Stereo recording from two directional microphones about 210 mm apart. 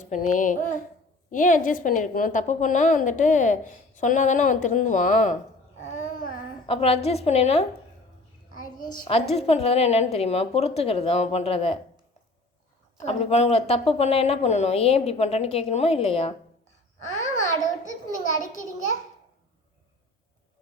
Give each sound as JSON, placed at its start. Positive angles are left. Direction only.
{"t": 0.0, "sound": "a woman's voice", "side_deg": 35}
{"t": 5.9, "sound": "babbling", "side_deg": 40}
{"t": 6.7, "sound": "a woman's voice", "side_deg": 30}
{"t": 9.0, "sound": "a woman's voice", "side_deg": 30}
{"t": 13.1, "sound": "a woman's voice", "side_deg": 30}
{"t": 17.2, "sound": "babbling", "side_deg": 35}